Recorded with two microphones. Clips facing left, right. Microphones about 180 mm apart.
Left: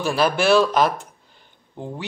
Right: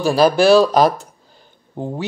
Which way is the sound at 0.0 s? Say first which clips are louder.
Right 6 dB; 35° right (ahead or behind).